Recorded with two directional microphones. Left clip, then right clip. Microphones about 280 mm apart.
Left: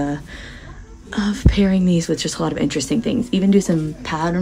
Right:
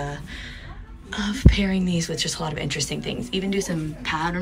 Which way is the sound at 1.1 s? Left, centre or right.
Left.